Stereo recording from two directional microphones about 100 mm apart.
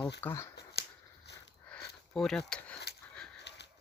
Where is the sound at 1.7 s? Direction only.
5° left (ahead or behind).